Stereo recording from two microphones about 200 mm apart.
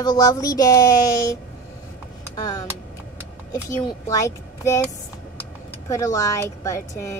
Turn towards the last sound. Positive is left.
turn(degrees=15)  # may be behind; listen again after turning